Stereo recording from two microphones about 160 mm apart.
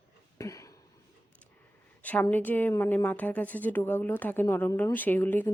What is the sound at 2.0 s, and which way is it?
A woman's voice, 10° left (ahead or behind).